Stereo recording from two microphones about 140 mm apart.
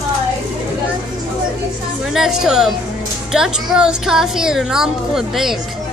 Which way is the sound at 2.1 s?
5° right (ahead or behind).